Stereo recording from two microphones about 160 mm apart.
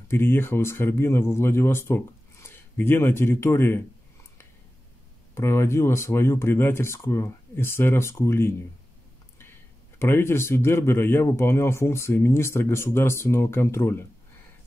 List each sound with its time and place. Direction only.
0.1 s speech: 15° left (ahead or behind)
5.3 s speech: 15° left (ahead or behind)
9.9 s speech: 15° left (ahead or behind)